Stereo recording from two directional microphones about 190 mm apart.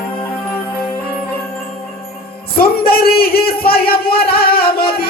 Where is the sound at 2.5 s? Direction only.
55° left (ahead or behind).